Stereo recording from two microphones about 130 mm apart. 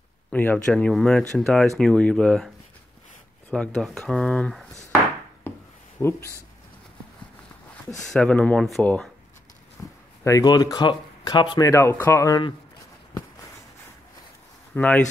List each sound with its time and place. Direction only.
0.3 s speech: 10° left (ahead or behind)
5.9 s speech: 20° left (ahead or behind)
8.1 s speech: 10° left (ahead or behind)
9.8 s a sound: 15° left (ahead or behind)
10.2 s speech: 30° left (ahead or behind)
14.7 s speech: 10° left (ahead or behind)